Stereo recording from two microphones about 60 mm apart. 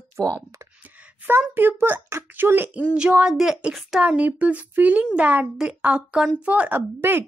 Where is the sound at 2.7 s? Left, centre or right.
Right.